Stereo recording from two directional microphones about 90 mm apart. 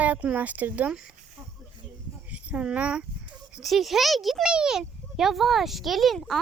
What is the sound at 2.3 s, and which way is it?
Speech, 15° right (ahead or behind).